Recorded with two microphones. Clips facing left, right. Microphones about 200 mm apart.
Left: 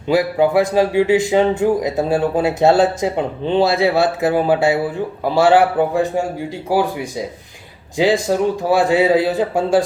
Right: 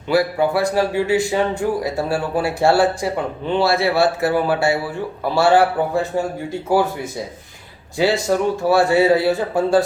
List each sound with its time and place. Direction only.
0.1 s a man's voice: 15° left (ahead or behind)